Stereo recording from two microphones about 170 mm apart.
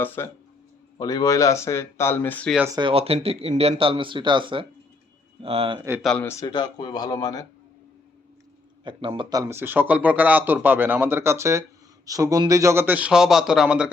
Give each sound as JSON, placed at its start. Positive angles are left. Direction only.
{"t": 0.0, "sound": "speech", "side_deg": 10}
{"t": 2.7, "sound": "speech", "side_deg": -30}
{"t": 6.0, "sound": "speech", "side_deg": 5}
{"t": 6.4, "sound": "speech", "side_deg": 25}
{"t": 8.8, "sound": "speech", "side_deg": -30}